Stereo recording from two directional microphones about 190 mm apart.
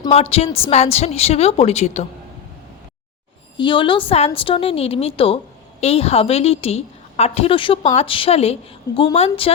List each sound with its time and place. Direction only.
0.1 s a woman's voice: 30° left (ahead or behind)
3.6 s a woman's voice: 25° left (ahead or behind)